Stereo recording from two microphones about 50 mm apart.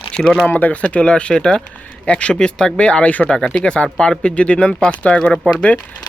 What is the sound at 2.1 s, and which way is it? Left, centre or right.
Speech, left.